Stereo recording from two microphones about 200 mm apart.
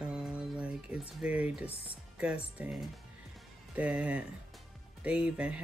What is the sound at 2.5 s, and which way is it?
Speech, 5° right (ahead or behind).